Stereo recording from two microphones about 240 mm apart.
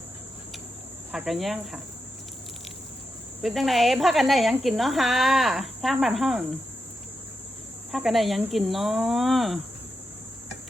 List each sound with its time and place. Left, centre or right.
1.1 s speech: centre
3.4 s speech: centre
7.9 s speech: centre